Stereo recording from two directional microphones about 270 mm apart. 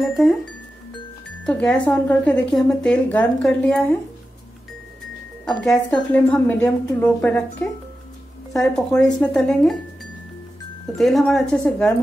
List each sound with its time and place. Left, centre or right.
0.1 s speech: centre
1.4 s speech: centre
5.4 s speech: centre
8.5 s speech: centre
11.0 s speech: centre